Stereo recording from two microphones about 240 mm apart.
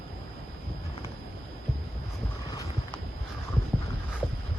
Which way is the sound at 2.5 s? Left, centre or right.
Centre.